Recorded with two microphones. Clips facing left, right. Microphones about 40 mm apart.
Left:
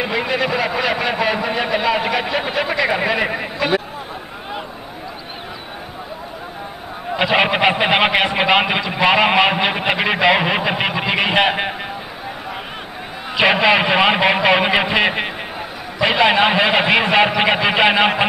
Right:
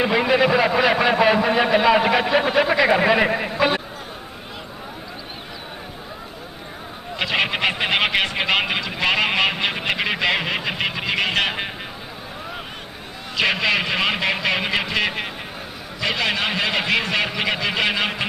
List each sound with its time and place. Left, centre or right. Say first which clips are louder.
0.0 s a sound: right 2 dB; centre
3.5 s speech: left 3 dB; centre
7.2 s a man's voice: left 6 dB; centre
13.3 s a man's voice: left 6 dB; left